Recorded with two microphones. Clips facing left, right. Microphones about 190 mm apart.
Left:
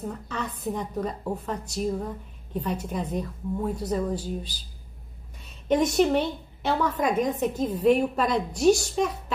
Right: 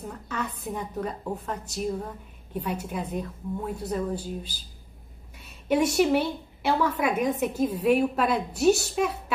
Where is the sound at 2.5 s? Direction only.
10° right (ahead or behind).